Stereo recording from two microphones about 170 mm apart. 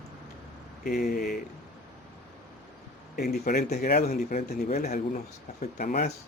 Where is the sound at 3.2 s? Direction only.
65° left (ahead or behind).